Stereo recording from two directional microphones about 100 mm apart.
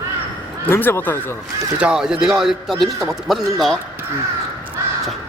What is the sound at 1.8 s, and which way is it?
A man's voice, 10° right (ahead or behind).